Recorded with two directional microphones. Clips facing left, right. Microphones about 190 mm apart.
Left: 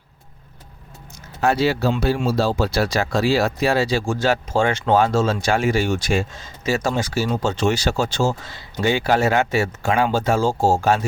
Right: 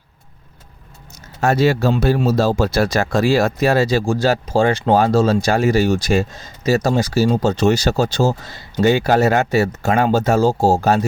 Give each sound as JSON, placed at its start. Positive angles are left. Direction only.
{"t": 1.4, "sound": "speech", "side_deg": -45}